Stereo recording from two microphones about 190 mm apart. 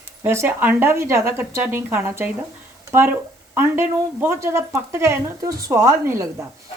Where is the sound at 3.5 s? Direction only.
15° right (ahead or behind).